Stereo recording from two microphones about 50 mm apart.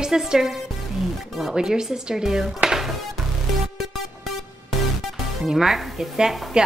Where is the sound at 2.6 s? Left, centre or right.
Centre.